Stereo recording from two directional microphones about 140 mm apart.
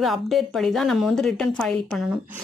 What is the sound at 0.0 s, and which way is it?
Speech, centre (ahead or behind).